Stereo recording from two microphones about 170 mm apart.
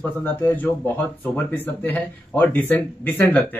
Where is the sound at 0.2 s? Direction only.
10° left (ahead or behind).